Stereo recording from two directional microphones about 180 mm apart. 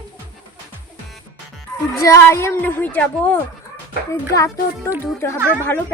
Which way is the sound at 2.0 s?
15° left (ahead or behind).